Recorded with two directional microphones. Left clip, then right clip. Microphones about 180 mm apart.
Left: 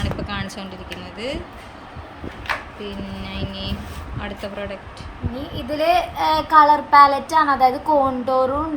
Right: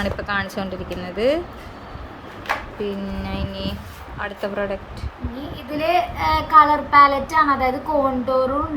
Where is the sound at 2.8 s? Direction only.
Centre (ahead or behind).